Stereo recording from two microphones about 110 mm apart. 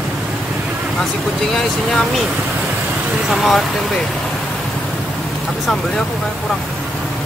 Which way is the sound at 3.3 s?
Centre (ahead or behind).